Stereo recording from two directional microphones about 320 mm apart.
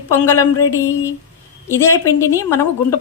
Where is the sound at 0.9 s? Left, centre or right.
Centre.